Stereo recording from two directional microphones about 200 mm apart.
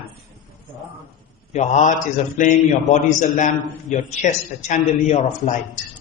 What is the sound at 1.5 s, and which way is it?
Mantra, 35° left (ahead or behind).